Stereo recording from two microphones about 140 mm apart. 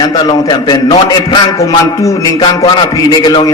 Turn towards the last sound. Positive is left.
turn(degrees=35)  # may be behind; listen again after turning